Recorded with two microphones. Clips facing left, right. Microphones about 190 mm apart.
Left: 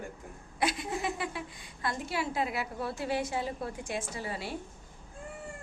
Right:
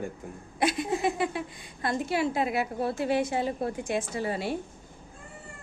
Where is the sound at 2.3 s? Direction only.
20° right (ahead or behind).